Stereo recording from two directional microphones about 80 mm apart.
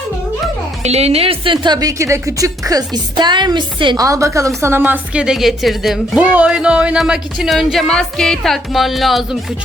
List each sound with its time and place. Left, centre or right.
1.5 s speech: right
1.8 s a woman's voice: right
3.9 s a woman's voice: right
4.8 s a woman's voice: right
5.2 s speech: centre
6.1 s a woman's voice: centre
7.0 s speech: centre